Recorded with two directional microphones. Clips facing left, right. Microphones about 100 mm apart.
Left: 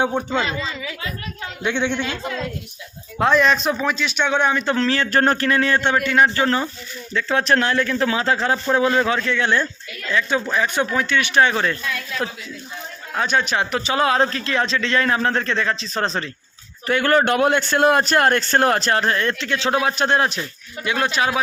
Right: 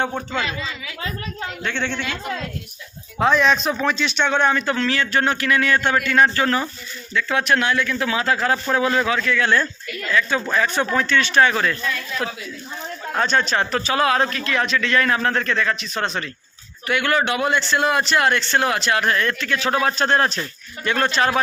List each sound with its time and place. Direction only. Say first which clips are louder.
0.0 s speech: left 3 dB; 15° left (ahead or behind)
1.6 s speech: left 4 dB; 15° left (ahead or behind)
3.2 s a man's voice: left 1 dB; centre (ahead or behind)
4.6 s a man's voice: left 2 dB; 30° left (ahead or behind); by 21.4 s 10° left (ahead or behind)